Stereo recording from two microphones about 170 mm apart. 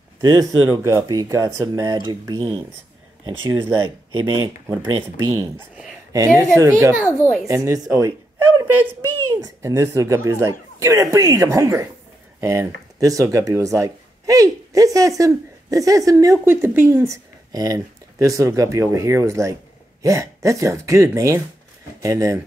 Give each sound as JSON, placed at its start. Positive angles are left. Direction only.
{"t": 0.2, "sound": "speech", "side_deg": -20}
{"t": 3.3, "sound": "a woman's voice", "side_deg": -15}